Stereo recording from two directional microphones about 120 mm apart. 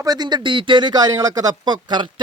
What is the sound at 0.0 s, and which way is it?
Speech, 35° right (ahead or behind).